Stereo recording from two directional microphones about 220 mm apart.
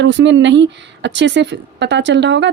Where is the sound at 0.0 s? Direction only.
55° right (ahead or behind).